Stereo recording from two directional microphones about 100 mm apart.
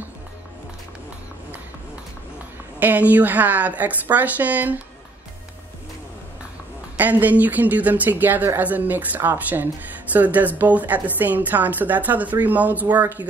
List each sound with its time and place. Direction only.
2.8 s a woman's voice: 15° right (ahead or behind)
7.0 s a woman's voice: 15° right (ahead or behind)